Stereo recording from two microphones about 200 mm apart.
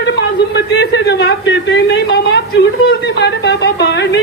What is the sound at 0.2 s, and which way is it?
Speech, 60° left (ahead or behind).